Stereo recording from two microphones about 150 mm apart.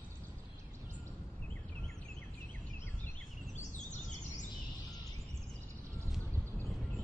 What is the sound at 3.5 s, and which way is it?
Bird, 55° left (ahead or behind).